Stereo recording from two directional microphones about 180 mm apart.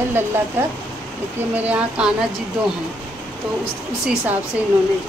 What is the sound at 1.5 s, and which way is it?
Speech, 5° right (ahead or behind).